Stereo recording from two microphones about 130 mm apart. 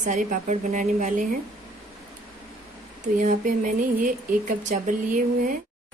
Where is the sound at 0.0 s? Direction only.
85° right.